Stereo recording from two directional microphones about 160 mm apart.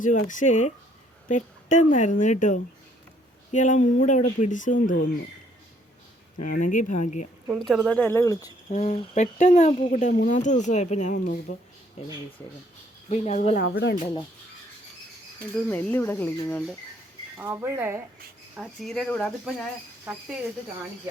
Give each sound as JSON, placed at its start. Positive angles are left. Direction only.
{"t": 0.0, "sound": "speech", "side_deg": 55}
{"t": 6.5, "sound": "speech", "side_deg": 55}
{"t": 7.6, "sound": "speech", "side_deg": 0}
{"t": 8.7, "sound": "speech", "side_deg": 45}
{"t": 13.1, "sound": "speech", "side_deg": 45}
{"t": 13.6, "sound": "speech", "side_deg": 80}
{"t": 15.5, "sound": "speech", "side_deg": 10}
{"t": 17.3, "sound": "speech", "side_deg": -10}
{"t": 18.5, "sound": "speech", "side_deg": -5}
{"t": 20.1, "sound": "speech", "side_deg": -10}